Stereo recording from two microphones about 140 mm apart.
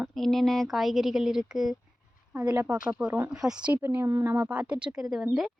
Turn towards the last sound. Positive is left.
turn(degrees=-5)  # may be behind; listen again after turning